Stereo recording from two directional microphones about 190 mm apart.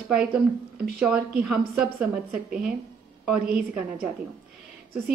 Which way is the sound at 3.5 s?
55° right (ahead or behind).